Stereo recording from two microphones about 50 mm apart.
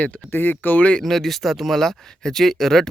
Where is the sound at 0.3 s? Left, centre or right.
Left.